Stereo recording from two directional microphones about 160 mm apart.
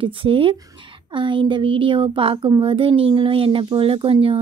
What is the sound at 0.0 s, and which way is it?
Speech, 35° right (ahead or behind).